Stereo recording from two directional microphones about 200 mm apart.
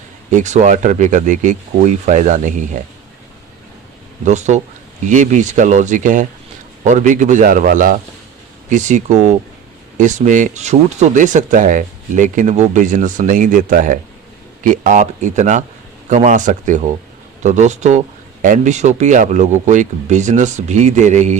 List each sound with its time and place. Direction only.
0.3 s speech: 35° right (ahead or behind)
4.3 s speech: 35° right (ahead or behind)